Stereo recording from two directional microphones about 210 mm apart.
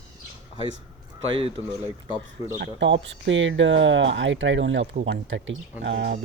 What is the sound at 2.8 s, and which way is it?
Speech, 60° right (ahead or behind).